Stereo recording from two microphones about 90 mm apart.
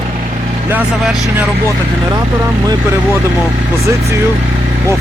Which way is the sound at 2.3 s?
40° right (ahead or behind).